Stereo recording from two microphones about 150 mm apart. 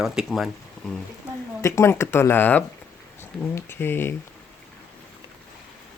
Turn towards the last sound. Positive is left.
turn(degrees=15)  # may be behind; listen again after turning